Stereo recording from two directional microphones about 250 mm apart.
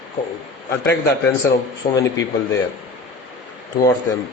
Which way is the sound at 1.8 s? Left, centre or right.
Left.